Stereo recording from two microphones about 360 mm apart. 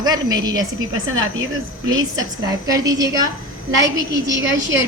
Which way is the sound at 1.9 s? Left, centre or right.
Centre.